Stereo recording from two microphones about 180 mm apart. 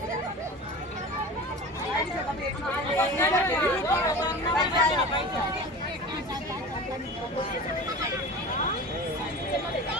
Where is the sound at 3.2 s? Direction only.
15° left (ahead or behind).